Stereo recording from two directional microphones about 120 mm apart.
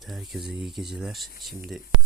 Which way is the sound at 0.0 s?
Centre (ahead or behind).